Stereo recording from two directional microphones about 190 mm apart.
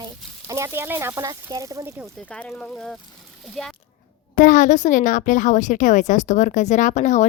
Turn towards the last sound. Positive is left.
turn(degrees=40)  # may be behind; listen again after turning